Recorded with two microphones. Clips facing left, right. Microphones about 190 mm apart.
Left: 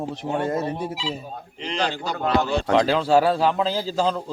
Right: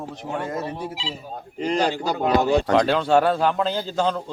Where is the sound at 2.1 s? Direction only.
15° right (ahead or behind).